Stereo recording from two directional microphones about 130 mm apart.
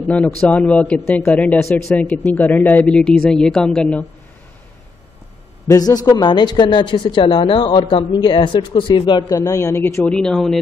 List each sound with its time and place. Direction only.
0.1 s speech: 10° left (ahead or behind)
5.7 s speech: 30° left (ahead or behind)
10.0 s speech: 5° left (ahead or behind)